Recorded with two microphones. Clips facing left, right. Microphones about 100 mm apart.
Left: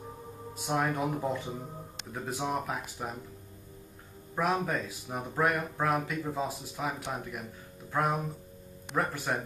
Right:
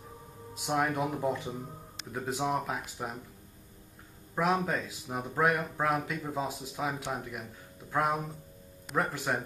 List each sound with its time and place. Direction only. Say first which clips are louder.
0.7 s speech: even; 15° right (ahead or behind)
3.0 s speech: even; 5° right (ahead or behind)
4.4 s speech: right 1 dB; 15° right (ahead or behind)